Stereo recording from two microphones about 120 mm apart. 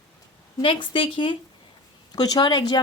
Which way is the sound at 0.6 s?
45° left (ahead or behind).